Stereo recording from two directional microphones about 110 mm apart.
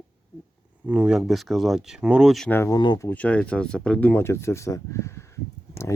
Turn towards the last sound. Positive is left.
turn(degrees=25)  # may be behind; listen again after turning